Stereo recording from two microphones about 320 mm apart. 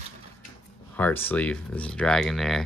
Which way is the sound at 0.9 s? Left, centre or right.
Centre.